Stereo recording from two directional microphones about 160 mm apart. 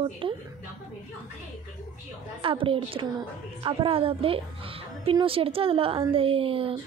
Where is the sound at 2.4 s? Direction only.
35° right (ahead or behind).